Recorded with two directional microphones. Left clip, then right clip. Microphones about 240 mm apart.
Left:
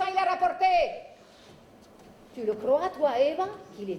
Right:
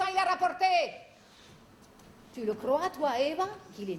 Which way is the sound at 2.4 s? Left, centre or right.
Centre.